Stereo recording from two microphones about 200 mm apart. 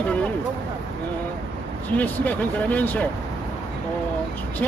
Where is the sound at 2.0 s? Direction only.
5° left (ahead or behind).